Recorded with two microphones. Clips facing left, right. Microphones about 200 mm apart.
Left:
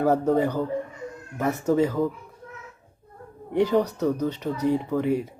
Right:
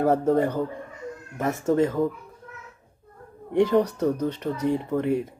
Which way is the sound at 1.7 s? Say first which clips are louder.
Even; 5° left (ahead or behind).